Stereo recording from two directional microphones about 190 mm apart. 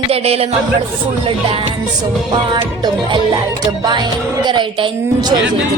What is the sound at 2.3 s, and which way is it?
A woman's voice, 25° right (ahead or behind).